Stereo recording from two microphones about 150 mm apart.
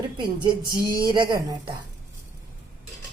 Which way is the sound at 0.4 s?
75° right (ahead or behind).